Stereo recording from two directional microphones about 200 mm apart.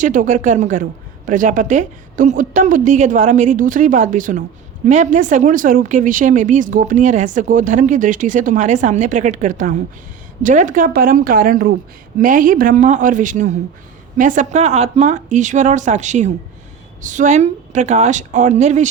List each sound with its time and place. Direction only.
0.0 s a woman's voice: 40° right (ahead or behind)